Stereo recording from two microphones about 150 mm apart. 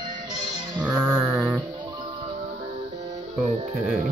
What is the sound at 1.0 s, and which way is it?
Mantra, 15° right (ahead or behind).